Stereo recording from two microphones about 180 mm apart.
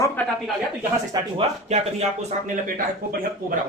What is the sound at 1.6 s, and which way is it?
Speech, 35° right (ahead or behind).